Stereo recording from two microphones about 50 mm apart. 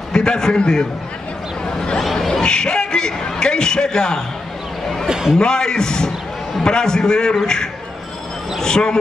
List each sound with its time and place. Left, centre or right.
0.1 s a man's voice: centre
5.0 s a man's voice: centre
5.4 s speech: centre